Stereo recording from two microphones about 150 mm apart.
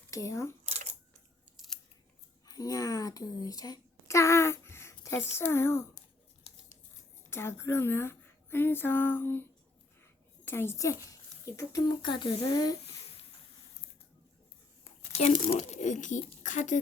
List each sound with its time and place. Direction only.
0.1 s speech: 20° left (ahead or behind)
0.6 s camera: 45° right (ahead or behind)
1.5 s scissors: centre (ahead or behind)
2.5 s a woman's voice: 25° left (ahead or behind)
6.5 s tearing: 40° left (ahead or behind)
7.3 s speech: 15° left (ahead or behind)
14.8 s a woman's voice: 45° left (ahead or behind)